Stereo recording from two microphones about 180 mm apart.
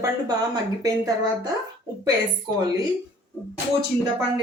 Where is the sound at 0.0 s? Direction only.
20° right (ahead or behind).